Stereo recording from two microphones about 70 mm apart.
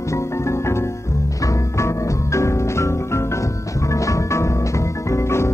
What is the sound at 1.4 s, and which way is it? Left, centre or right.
Music, left.